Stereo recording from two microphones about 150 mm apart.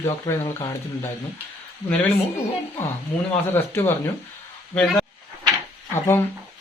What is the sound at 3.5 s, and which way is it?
Speech, 15° left (ahead or behind).